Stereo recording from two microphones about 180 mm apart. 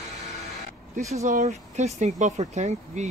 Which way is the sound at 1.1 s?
40° right (ahead or behind).